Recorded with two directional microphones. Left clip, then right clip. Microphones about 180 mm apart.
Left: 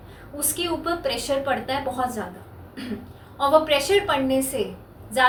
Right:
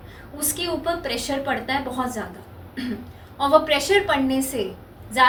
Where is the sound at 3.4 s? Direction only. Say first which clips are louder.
Right 1 dB; 15° left (ahead or behind).